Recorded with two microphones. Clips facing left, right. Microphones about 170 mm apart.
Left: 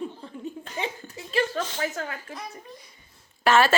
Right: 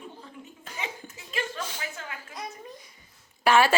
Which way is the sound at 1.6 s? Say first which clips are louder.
Left 6 dB; 10° right (ahead or behind).